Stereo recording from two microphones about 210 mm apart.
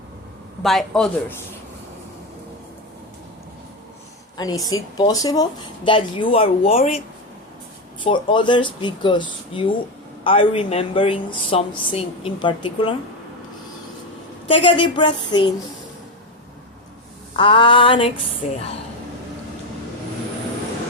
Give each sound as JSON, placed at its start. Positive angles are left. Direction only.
{"t": 0.6, "sound": "speech", "side_deg": 0}
{"t": 4.4, "sound": "speech", "side_deg": 20}
{"t": 8.0, "sound": "speech", "side_deg": 25}
{"t": 14.6, "sound": "speech", "side_deg": 25}
{"t": 17.3, "sound": "speech", "side_deg": 25}